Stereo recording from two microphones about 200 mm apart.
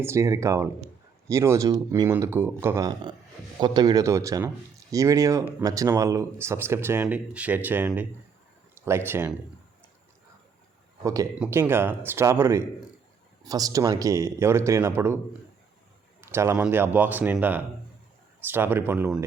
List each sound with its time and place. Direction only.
0.0 s speech: 15° right (ahead or behind)
11.0 s speech: 15° right (ahead or behind)
16.2 s speech: 15° right (ahead or behind)